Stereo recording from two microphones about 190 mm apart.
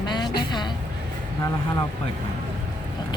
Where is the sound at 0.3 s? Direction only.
25° left (ahead or behind).